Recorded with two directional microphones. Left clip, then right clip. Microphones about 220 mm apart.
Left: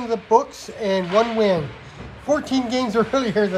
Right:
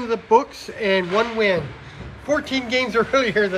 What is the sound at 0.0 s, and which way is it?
A man's voice, 10° left (ahead or behind).